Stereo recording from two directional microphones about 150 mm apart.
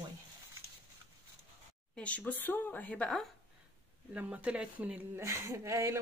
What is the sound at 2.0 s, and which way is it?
Speech, 10° left (ahead or behind).